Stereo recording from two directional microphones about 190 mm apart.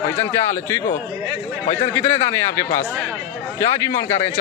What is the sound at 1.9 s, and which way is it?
A man's voice, 15° left (ahead or behind).